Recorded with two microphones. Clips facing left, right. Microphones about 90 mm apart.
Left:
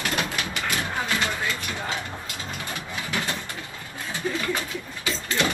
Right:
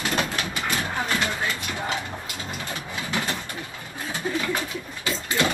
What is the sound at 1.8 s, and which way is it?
Mechanisms, 20° right (ahead or behind).